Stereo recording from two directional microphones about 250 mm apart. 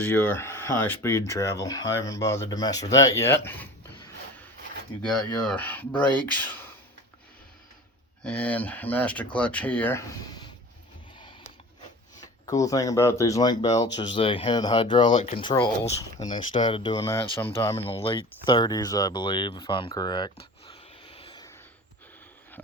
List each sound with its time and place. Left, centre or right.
0.0 s speech: centre
5.0 s speech: centre
8.2 s speech: centre
12.5 s speech: centre
17.7 s speech: left